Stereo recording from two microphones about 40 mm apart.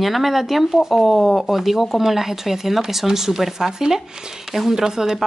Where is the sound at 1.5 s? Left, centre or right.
Centre.